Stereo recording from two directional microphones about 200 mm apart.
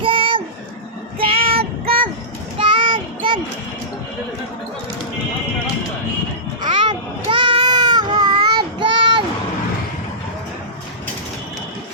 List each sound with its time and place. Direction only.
0.0 s a sound: 25° right (ahead or behind)
1.2 s child singing: 25° right (ahead or behind)
2.6 s child singing: 25° right (ahead or behind)
6.7 s baby cry: 25° right (ahead or behind)